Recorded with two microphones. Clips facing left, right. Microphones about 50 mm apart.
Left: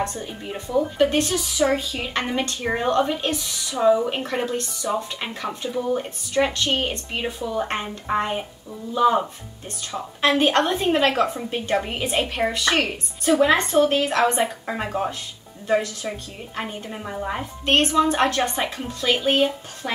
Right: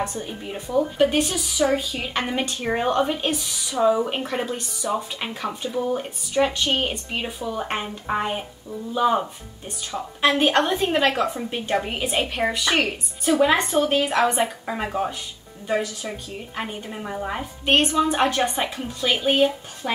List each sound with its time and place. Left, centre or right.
0.0 s a woman's voice: centre
2.9 s speech: centre
3.7 s a woman's voice: centre